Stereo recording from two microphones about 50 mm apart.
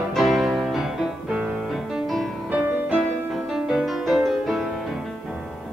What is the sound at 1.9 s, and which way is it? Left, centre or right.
Music, centre.